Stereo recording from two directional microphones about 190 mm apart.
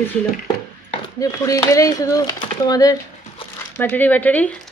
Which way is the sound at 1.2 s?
15° left (ahead or behind).